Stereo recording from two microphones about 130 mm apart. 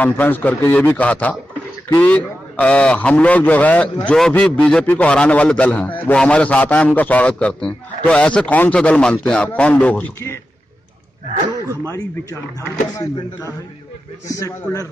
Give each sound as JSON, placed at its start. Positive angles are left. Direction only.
{"t": 0.0, "sound": "a man's voice", "side_deg": 15}
{"t": 11.6, "sound": "speech", "side_deg": -20}
{"t": 11.9, "sound": "speech", "side_deg": 25}